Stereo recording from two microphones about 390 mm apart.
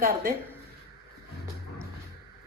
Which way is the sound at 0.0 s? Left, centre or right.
Right.